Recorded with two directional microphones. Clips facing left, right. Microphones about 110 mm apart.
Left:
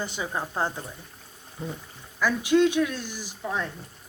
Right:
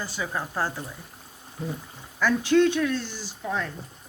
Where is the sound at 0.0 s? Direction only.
20° left (ahead or behind).